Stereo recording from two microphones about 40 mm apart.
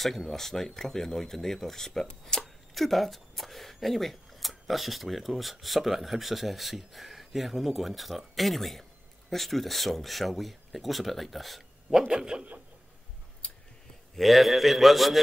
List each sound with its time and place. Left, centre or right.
0.0 s speech: centre
12.1 s speech: centre
14.1 s speech: centre